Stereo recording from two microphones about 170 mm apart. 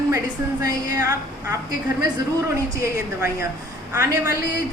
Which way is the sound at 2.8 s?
15° right (ahead or behind).